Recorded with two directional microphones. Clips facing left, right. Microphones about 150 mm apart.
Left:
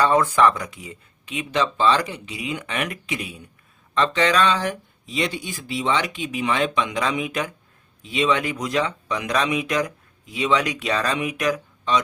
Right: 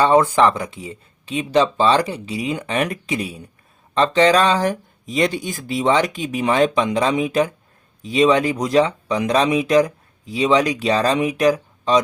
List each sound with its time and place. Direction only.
0.0 s speech: 25° right (ahead or behind)